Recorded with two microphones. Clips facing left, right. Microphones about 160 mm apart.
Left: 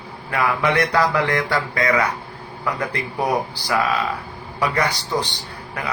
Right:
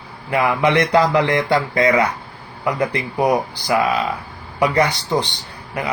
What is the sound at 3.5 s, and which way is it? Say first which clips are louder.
Speech: right 3 dB; 20° right (ahead or behind).